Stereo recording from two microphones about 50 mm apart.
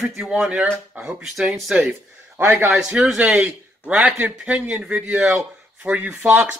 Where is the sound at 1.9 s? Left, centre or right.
Right.